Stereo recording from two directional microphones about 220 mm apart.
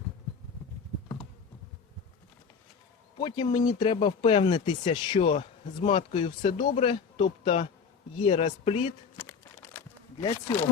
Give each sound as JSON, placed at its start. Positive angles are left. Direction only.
{"t": 3.2, "sound": "speech", "side_deg": 20}